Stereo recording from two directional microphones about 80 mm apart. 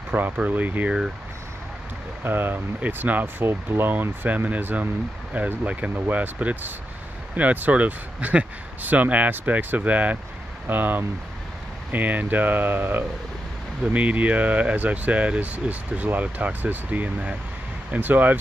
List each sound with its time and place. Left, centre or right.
0.1 s speech: centre
2.2 s speech: right